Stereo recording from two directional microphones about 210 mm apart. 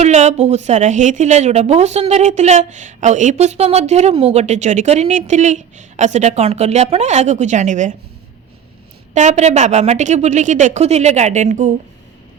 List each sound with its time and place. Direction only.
0.0 s a woman's voice: 35° right (ahead or behind)
9.1 s a woman's voice: 35° right (ahead or behind)